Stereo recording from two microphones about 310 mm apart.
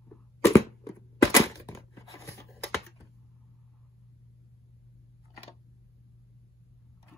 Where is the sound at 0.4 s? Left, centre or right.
Centre.